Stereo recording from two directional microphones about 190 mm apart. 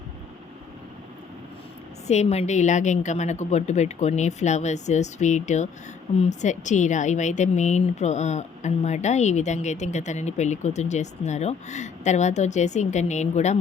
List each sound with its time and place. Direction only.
2.0 s speech: 35° left (ahead or behind)